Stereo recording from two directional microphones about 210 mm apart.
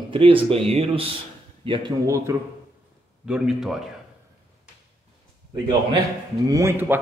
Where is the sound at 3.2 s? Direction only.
5° right (ahead or behind).